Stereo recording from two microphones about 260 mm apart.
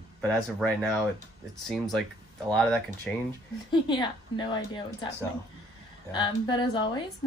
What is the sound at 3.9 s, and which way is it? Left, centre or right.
A woman's voice, centre.